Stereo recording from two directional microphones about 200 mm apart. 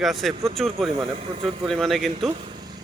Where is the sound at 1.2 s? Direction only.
35° right (ahead or behind).